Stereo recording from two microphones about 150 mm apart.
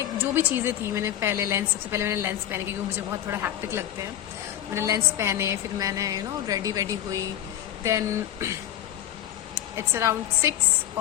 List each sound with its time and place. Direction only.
0.3 s a woman's voice: 15° right (ahead or behind)
9.6 s a woman's voice: 15° right (ahead or behind)